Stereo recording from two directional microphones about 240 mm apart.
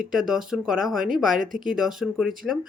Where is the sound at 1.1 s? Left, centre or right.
Right.